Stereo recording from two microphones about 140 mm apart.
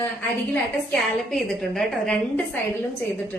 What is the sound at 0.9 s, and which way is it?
A woman's voice, 5° left (ahead or behind).